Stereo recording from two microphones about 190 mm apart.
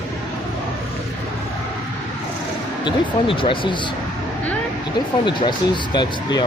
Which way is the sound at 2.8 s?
25° left (ahead or behind).